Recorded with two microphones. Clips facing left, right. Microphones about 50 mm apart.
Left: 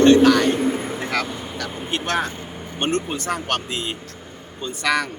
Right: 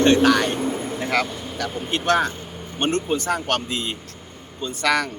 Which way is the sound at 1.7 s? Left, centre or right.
Centre.